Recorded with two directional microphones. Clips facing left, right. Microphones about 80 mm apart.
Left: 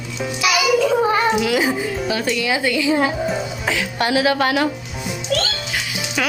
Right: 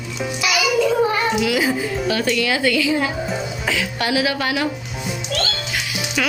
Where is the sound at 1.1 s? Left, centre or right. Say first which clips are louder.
Left 2 dB; left.